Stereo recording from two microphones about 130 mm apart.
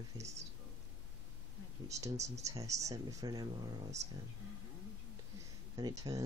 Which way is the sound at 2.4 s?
25° right (ahead or behind).